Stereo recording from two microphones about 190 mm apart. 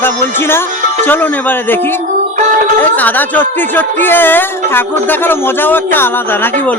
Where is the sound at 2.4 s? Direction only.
40° right (ahead or behind).